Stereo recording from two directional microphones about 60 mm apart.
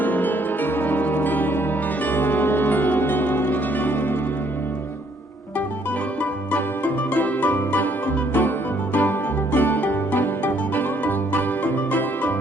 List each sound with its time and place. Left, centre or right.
0.0 s music: left
6.5 s music: left